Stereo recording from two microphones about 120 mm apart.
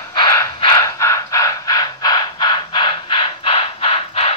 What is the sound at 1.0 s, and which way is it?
Crow, 25° left (ahead or behind).